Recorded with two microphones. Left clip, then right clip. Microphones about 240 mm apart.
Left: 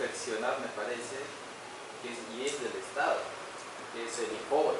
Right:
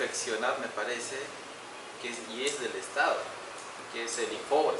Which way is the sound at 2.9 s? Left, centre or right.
Centre.